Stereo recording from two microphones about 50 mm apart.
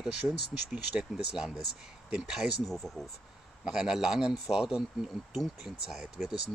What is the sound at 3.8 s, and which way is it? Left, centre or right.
A man's voice, centre.